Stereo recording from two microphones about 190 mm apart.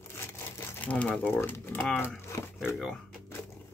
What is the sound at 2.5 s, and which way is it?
Speech, centre (ahead or behind).